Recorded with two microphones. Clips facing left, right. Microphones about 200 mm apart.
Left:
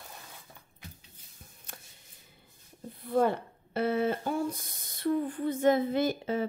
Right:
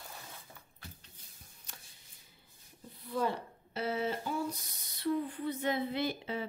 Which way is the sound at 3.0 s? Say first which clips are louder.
Left 7 dB; 55° left (ahead or behind).